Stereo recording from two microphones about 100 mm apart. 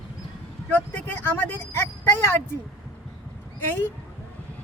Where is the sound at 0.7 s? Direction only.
20° left (ahead or behind).